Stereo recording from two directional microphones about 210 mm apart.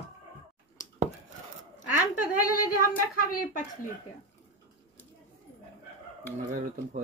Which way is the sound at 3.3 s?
40° left (ahead or behind).